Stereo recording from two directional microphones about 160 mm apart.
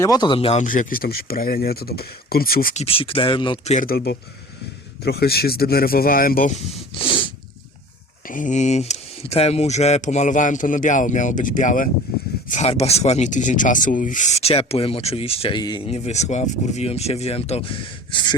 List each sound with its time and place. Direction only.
0.0 s speech: 25° left (ahead or behind)
0.6 s speech: 55° left (ahead or behind)
2.7 s speech: 35° left (ahead or behind)
3.8 s speech: 75° left (ahead or behind)
7.0 s snort: 30° left (ahead or behind)
8.3 s speech: 55° left (ahead or behind); by 15.8 s 30° left (ahead or behind)
15.9 s speech: 45° left (ahead or behind)